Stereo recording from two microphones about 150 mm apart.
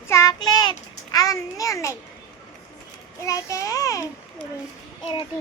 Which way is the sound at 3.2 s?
20° left (ahead or behind).